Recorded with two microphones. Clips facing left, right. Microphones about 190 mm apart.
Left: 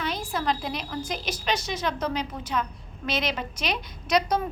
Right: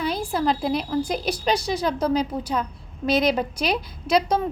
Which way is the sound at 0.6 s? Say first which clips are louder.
Right 9 dB; 35° right (ahead or behind).